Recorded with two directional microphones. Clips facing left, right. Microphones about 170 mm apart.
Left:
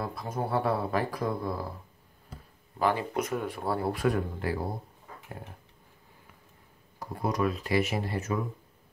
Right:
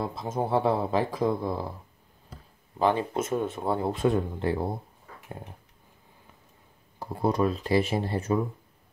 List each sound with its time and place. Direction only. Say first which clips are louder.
0.0 s speech: right 3 dB; 20° right (ahead or behind)
2.8 s speech: right 3 dB; 25° right (ahead or behind)
7.0 s speech: right 4 dB; 25° right (ahead or behind)